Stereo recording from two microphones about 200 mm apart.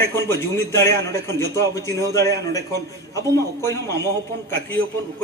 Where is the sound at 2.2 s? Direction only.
55° right (ahead or behind).